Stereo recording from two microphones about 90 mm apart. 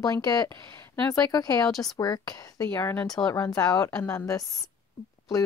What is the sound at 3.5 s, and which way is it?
Speech, 45° left (ahead or behind).